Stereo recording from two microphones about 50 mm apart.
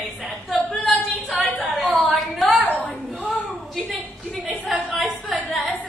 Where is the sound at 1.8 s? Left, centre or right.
Right.